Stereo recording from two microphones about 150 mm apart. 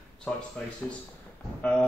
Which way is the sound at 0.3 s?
5° left (ahead or behind).